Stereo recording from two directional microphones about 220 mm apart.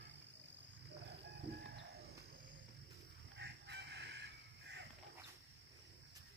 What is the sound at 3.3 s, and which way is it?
Chicken, 50° right (ahead or behind).